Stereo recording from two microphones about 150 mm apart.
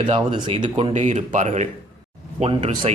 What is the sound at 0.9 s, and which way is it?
Speech, 50° right (ahead or behind).